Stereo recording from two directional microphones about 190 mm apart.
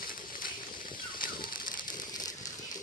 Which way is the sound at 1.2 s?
50° left (ahead or behind).